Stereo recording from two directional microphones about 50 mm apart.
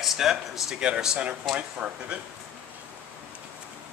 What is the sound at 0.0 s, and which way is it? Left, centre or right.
Speech, centre.